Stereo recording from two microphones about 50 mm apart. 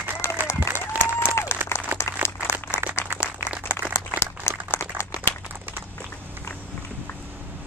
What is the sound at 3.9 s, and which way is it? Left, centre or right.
Crumpling, left.